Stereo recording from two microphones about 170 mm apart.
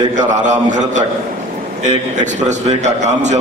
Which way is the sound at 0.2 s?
45° right (ahead or behind).